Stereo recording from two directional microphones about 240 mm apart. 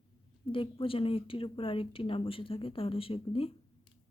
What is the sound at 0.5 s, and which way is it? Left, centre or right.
Speech, left.